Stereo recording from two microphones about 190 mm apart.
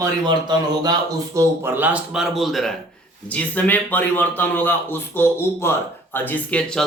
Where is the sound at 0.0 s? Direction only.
20° right (ahead or behind).